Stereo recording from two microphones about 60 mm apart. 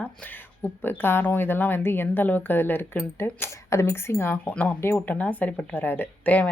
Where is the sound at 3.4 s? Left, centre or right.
Left.